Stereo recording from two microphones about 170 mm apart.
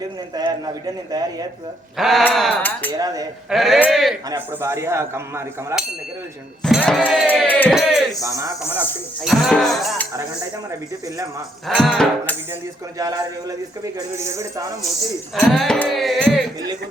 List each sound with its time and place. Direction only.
0.3 s speech: 25° right (ahead or behind)
2.0 s music: centre (ahead or behind)
4.3 s speech: 15° right (ahead or behind)
6.6 s music: centre (ahead or behind)
7.7 s music: centre (ahead or behind)
8.2 s speech: 15° right (ahead or behind)
9.2 s music: centre (ahead or behind)
11.7 s music: centre (ahead or behind)
13.0 s speech: 20° right (ahead or behind)
15.4 s music: centre (ahead or behind)